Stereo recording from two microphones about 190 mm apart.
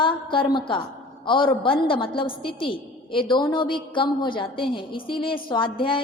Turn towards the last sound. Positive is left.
turn(degrees=25)  # may be behind; listen again after turning